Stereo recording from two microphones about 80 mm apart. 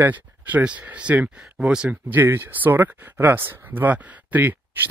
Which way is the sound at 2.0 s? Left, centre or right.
Right.